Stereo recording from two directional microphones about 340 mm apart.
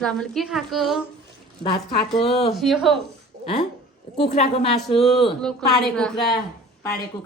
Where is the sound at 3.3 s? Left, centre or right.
Right.